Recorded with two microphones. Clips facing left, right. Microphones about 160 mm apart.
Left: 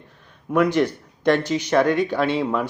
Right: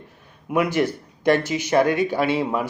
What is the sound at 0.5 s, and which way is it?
Speech, 5° right (ahead or behind).